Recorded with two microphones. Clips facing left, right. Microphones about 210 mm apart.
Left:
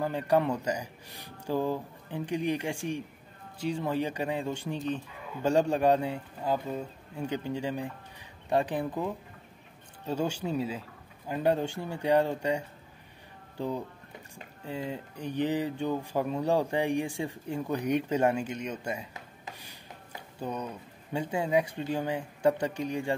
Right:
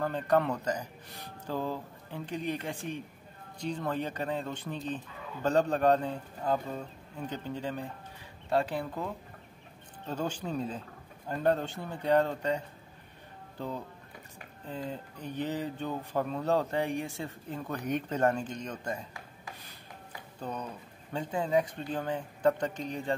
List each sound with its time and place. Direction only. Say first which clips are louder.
0.0 s speech: left 1 dB; 10° left (ahead or behind)
14.7 s speech: left 2 dB; 10° left (ahead or behind)
19.4 s a sound: left 2 dB; 20° left (ahead or behind)
20.3 s speech: left 3 dB; 10° left (ahead or behind)